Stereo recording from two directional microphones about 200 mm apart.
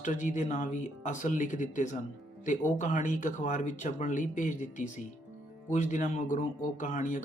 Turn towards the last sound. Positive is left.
turn(degrees=40)  # may be behind; listen again after turning